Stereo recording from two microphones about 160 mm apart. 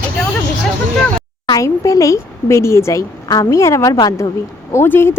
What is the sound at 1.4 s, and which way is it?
A woman's voice, 25° left (ahead or behind).